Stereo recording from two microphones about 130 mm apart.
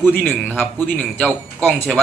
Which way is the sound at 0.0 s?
10° left (ahead or behind).